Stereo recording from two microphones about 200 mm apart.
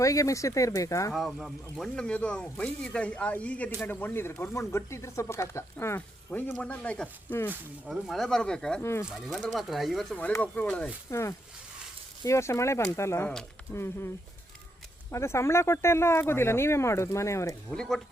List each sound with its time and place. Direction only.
0.0 s speech: 15° left (ahead or behind)
1.1 s speech: centre (ahead or behind)
7.5 s speech: centre (ahead or behind)
9.0 s speech: centre (ahead or behind)
15.1 s speech: 15° left (ahead or behind)
17.7 s speech: centre (ahead or behind)